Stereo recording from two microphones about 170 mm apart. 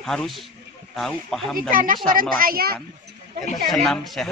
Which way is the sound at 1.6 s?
55° right (ahead or behind).